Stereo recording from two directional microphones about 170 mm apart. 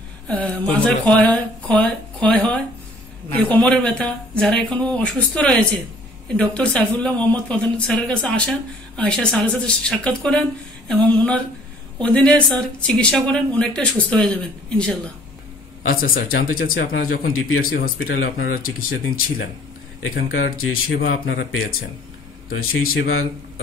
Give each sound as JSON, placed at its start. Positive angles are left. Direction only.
{"t": 0.3, "sound": "speech", "side_deg": 5}
{"t": 15.9, "sound": "speech", "side_deg": 60}
{"t": 20.3, "sound": "speech", "side_deg": 60}